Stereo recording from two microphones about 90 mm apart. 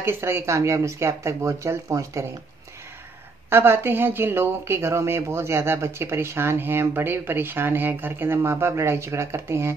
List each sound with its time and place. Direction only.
0.0 s speech: 30° right (ahead or behind)
3.4 s a woman's voice: 25° right (ahead or behind)